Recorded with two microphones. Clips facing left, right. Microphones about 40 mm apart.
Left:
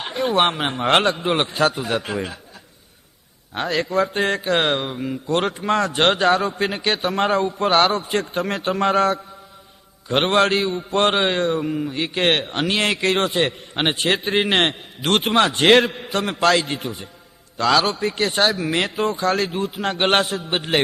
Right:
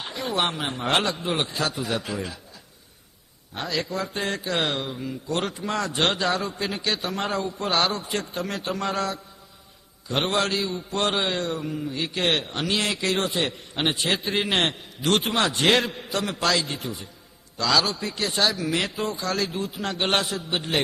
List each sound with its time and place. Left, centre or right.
0.0 s a man's voice: left
3.5 s a man's voice: left